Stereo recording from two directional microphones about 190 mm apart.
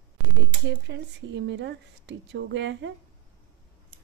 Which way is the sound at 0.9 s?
70° right (ahead or behind).